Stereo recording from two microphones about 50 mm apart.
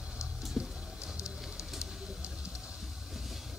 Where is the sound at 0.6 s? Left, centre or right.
Centre.